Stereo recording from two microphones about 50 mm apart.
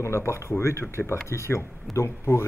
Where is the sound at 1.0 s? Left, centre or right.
Left.